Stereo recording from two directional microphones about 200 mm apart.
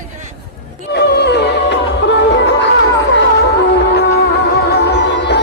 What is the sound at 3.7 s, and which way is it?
Music, 55° left (ahead or behind).